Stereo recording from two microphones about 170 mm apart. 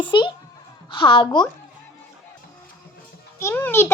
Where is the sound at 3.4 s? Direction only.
15° left (ahead or behind).